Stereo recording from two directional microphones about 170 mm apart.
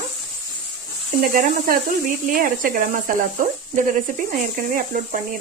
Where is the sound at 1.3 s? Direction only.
55° right (ahead or behind).